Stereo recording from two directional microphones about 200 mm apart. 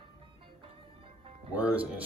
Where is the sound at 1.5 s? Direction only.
5° right (ahead or behind).